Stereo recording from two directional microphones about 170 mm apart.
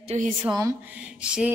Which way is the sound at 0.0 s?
40° right (ahead or behind).